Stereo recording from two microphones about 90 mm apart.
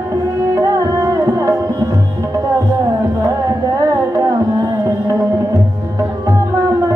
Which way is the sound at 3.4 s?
40° right (ahead or behind).